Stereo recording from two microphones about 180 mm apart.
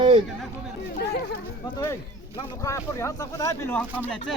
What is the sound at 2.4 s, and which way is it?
Speech, 15° left (ahead or behind).